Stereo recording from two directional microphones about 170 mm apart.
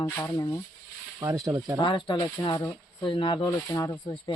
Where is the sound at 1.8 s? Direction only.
30° left (ahead or behind).